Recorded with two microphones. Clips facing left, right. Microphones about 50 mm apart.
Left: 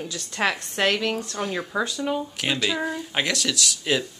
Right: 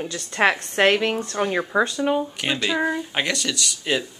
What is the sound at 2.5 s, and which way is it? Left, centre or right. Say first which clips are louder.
Speech: right 4 dB; centre.